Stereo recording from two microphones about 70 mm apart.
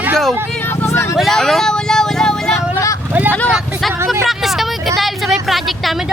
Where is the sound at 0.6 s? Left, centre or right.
Left.